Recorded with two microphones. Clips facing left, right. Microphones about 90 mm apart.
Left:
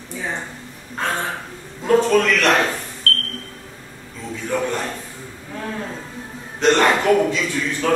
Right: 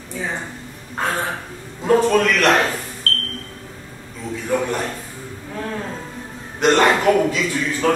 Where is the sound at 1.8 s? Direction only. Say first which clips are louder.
Even; 5° right (ahead or behind).